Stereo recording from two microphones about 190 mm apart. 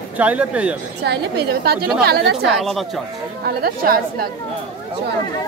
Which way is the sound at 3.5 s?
50° right (ahead or behind).